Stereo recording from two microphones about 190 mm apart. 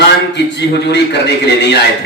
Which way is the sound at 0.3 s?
65° left (ahead or behind).